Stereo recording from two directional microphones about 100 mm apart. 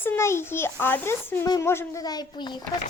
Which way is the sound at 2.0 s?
40° left (ahead or behind).